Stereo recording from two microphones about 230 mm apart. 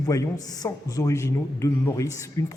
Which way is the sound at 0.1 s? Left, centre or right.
Centre.